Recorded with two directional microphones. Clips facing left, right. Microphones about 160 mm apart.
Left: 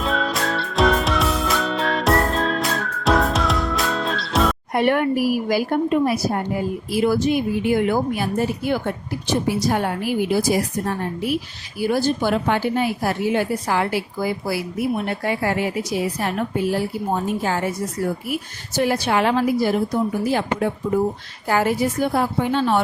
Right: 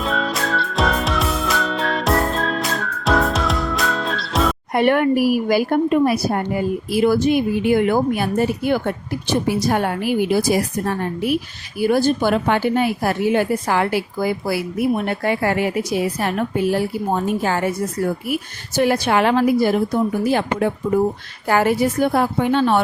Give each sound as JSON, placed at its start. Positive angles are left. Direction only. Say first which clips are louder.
{"t": 0.0, "sound": "music", "louder": "even", "side_deg": 0}
{"t": 4.7, "sound": "a woman's voice", "louder": "right 4 dB", "side_deg": -65}
{"t": 11.8, "sound": "a woman's voice", "louder": "right 3 dB", "side_deg": -55}
{"t": 17.4, "sound": "a woman's voice", "louder": "right 3 dB", "side_deg": -70}